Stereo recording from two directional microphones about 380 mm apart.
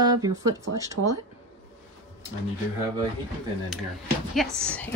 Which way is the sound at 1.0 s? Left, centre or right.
Right.